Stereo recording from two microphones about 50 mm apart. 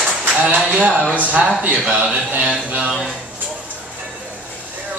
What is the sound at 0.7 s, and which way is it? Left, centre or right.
Speech, right.